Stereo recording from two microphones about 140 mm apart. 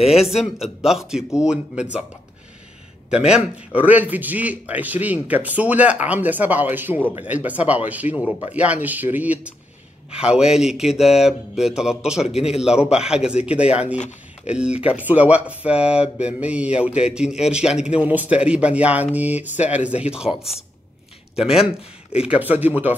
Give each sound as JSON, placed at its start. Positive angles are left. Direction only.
{"t": 0.0, "sound": "speech", "side_deg": -5}
{"t": 3.1, "sound": "speech", "side_deg": -5}
{"t": 13.9, "sound": "speech", "side_deg": 55}
{"t": 14.5, "sound": "speech", "side_deg": -5}